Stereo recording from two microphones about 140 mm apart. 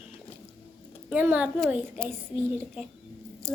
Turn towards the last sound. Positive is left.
turn(degrees=5)  # may be behind; listen again after turning